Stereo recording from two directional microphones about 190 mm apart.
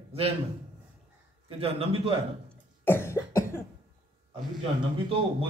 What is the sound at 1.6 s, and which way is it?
Speech, 30° right (ahead or behind).